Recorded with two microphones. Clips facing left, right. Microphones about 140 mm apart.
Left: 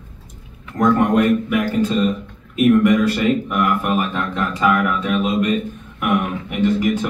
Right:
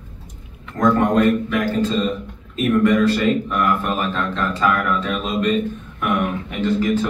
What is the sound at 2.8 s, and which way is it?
A man's voice, 10° left (ahead or behind).